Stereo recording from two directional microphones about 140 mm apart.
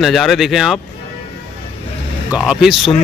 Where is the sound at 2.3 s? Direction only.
5° right (ahead or behind).